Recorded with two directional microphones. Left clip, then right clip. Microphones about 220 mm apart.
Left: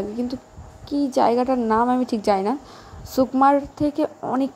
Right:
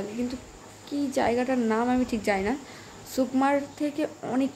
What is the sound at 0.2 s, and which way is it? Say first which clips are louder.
A woman's voice: left 4 dB; 25° left (ahead or behind).